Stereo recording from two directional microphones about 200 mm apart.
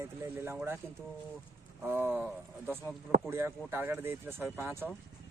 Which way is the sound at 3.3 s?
10° right (ahead or behind).